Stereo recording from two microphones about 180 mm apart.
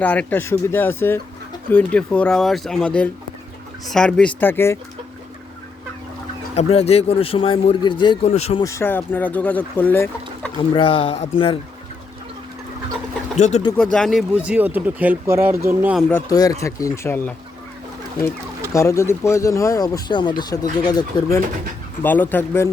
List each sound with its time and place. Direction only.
0.0 s speech: 5° left (ahead or behind)
6.5 s a man's voice: 35° left (ahead or behind)
8.6 s speech: 15° left (ahead or behind)
10.8 s a man's voice: 30° left (ahead or behind)
13.3 s speech: 40° left (ahead or behind)
13.7 s speech: 5° left (ahead or behind)
16.3 s speech: 20° left (ahead or behind)
18.7 s speech: 15° left (ahead or behind)